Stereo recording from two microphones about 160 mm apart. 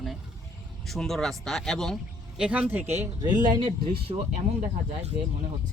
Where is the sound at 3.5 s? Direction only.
30° right (ahead or behind).